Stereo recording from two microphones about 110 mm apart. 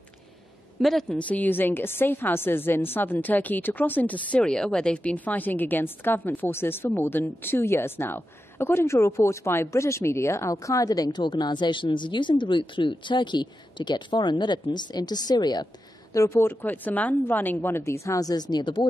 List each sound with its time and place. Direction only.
0.7 s a woman's voice: centre (ahead or behind); by 18.9 s 45° left (ahead or behind)